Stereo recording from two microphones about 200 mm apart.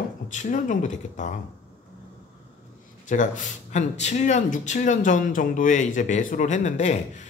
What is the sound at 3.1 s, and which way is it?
Speech, 40° left (ahead or behind).